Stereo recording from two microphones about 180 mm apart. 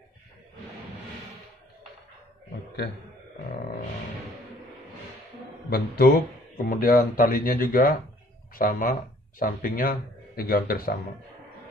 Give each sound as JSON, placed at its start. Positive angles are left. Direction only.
{"t": 5.7, "sound": "speech", "side_deg": 60}